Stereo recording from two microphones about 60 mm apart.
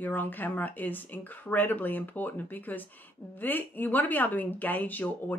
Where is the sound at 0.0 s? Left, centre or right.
Left.